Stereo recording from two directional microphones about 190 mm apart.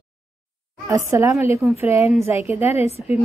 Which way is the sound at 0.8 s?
15° right (ahead or behind).